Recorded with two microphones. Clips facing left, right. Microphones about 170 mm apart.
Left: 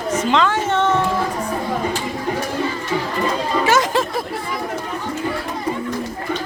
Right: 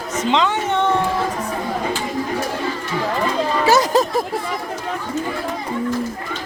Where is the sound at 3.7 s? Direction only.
35° right (ahead or behind).